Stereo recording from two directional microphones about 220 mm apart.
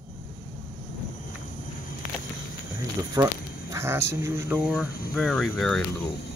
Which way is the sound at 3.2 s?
15° right (ahead or behind).